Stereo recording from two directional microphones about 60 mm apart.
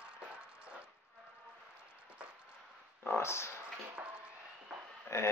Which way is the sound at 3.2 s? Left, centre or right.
Left.